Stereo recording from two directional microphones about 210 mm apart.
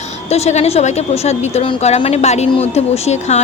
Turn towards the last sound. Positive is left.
turn(degrees=30)  # may be behind; listen again after turning